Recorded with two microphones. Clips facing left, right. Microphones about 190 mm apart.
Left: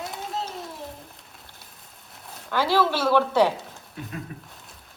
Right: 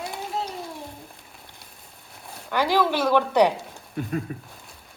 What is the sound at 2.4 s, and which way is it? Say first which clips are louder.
A woman's voice: even; 15° right (ahead or behind).